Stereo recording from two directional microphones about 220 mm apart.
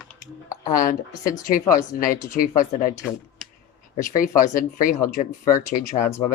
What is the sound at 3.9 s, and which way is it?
Speech, 40° left (ahead or behind).